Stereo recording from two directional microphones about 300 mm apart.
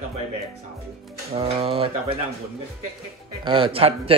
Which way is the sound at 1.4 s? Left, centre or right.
Centre.